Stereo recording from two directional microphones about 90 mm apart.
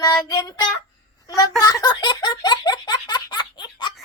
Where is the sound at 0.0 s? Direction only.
40° left (ahead or behind).